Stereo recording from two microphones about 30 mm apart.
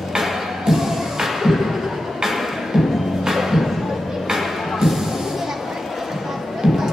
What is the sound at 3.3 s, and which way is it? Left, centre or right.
Music, centre.